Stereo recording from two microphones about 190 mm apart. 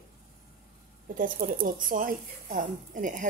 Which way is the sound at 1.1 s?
45° right (ahead or behind).